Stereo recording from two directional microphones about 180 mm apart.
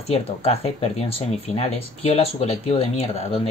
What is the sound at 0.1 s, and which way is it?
Speech, 35° left (ahead or behind).